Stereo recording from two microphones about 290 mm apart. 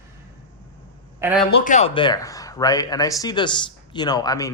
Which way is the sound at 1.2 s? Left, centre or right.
Centre.